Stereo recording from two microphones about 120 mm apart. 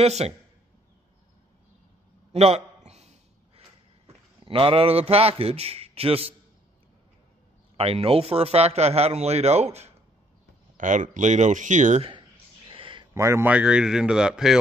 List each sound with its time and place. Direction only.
0.0 s a man's voice: 65° right (ahead or behind)
2.3 s a sound: 65° right (ahead or behind)
4.5 s a man's voice: 50° right (ahead or behind)
7.7 s a man's voice: 55° right (ahead or behind)
10.8 s speech: 90° right
12.0 s a sound: 40° right (ahead or behind)
13.1 s speech: 20° right (ahead or behind)
13.5 s speech: 10° right (ahead or behind)